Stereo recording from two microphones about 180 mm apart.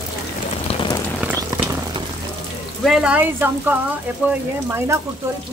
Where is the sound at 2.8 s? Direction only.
5° right (ahead or behind).